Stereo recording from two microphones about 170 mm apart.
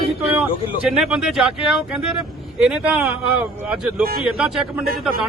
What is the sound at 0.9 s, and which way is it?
Speech, 5° right (ahead or behind).